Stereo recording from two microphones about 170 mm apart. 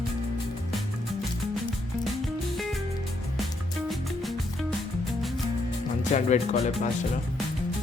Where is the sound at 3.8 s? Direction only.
Centre (ahead or behind).